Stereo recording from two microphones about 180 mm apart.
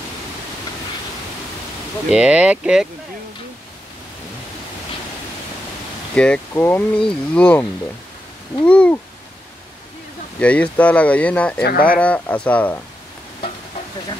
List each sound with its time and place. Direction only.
2.0 s speech: 5° right (ahead or behind)
6.1 s speech: 5° left (ahead or behind)
8.6 s speech: 5° left (ahead or behind)
10.4 s speech: 5° left (ahead or behind)
11.6 s speech: 55° left (ahead or behind)
12.0 s speech: 5° left (ahead or behind)